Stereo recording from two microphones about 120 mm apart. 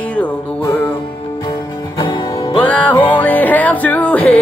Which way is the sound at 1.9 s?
35° left (ahead or behind).